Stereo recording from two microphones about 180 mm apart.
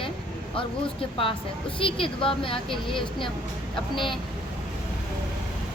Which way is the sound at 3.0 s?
Centre (ahead or behind).